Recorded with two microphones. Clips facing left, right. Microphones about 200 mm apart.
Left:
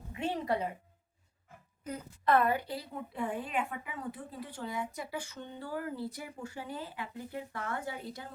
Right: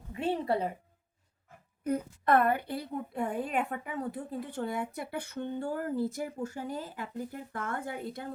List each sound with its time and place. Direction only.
0.1 s music: 30° right (ahead or behind)
1.8 s speech: 55° right (ahead or behind)